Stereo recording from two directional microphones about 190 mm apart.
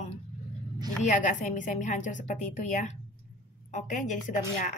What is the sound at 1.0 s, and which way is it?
Speech, 40° left (ahead or behind).